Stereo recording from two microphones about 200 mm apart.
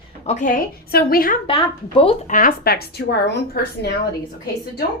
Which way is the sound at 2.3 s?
40° left (ahead or behind).